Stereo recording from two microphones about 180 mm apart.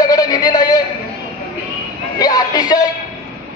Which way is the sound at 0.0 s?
20° left (ahead or behind).